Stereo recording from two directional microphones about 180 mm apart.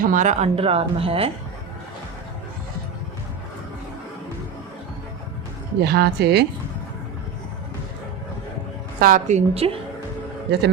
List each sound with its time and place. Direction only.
0.0 s speech: 45° right (ahead or behind)
5.8 s speech: 60° right (ahead or behind)
9.0 s speech: 50° right (ahead or behind)